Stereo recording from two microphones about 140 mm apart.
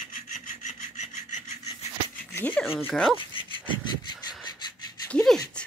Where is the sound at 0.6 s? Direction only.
55° left (ahead or behind).